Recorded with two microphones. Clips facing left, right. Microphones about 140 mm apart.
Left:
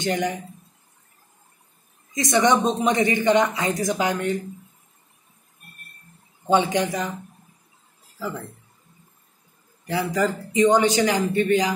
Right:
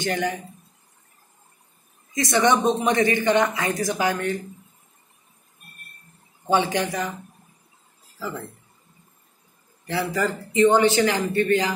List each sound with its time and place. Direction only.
0.0 s speech: 20° left (ahead or behind)
2.1 s a man's voice: 20° left (ahead or behind)
6.5 s speech: 20° left (ahead or behind)
9.8 s a man's voice: 15° left (ahead or behind)